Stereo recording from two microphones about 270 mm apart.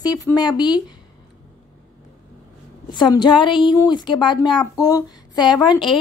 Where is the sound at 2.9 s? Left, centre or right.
Centre.